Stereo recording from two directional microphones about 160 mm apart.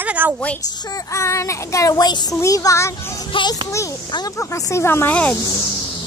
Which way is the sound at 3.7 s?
20° left (ahead or behind).